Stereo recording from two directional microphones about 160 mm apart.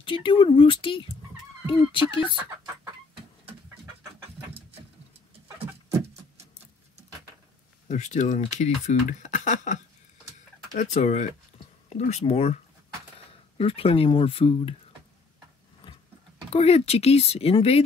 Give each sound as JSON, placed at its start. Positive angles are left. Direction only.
{"t": 0.0, "sound": "speech", "side_deg": 35}
{"t": 2.2, "sound": "speech", "side_deg": -15}
{"t": 7.9, "sound": "speech", "side_deg": 45}
{"t": 13.6, "sound": "speech", "side_deg": 35}
{"t": 16.5, "sound": "speech", "side_deg": 40}